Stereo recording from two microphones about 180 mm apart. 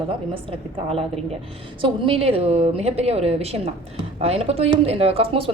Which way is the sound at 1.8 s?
30° right (ahead or behind).